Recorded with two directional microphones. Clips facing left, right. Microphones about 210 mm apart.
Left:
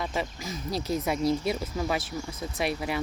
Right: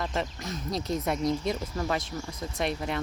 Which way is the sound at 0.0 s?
5° left (ahead or behind).